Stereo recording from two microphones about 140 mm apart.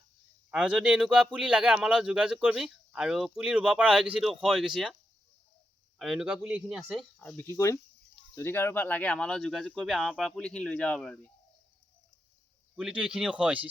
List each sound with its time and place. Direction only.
0.5 s speech: 5° right (ahead or behind)
6.0 s speech: 5° right (ahead or behind)
7.4 s speech: 20° left (ahead or behind); by 11.3 s 5° left (ahead or behind)
12.7 s speech: 5° right (ahead or behind)